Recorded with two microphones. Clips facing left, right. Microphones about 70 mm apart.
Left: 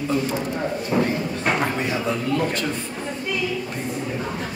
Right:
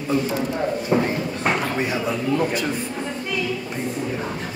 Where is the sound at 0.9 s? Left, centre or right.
Right.